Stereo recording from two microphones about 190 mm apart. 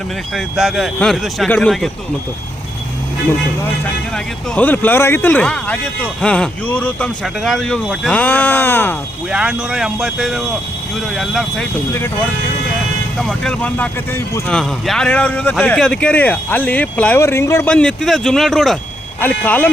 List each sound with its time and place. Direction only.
0.3 s speech: centre (ahead or behind)
4.5 s speech: 10° left (ahead or behind)
9.3 s speech: 5° right (ahead or behind)
13.1 s speech: 5° left (ahead or behind)